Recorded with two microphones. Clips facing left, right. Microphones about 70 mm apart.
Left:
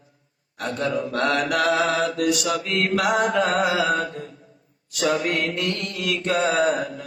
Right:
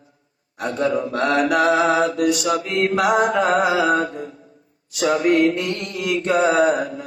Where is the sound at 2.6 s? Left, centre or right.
Centre.